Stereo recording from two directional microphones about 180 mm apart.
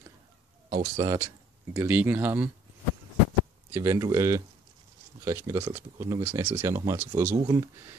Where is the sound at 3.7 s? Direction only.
15° right (ahead or behind).